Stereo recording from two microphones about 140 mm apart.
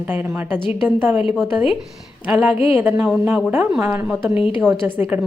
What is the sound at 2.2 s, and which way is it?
Speech, 10° right (ahead or behind).